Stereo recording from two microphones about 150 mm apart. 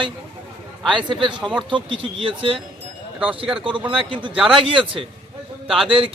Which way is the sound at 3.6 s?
35° right (ahead or behind).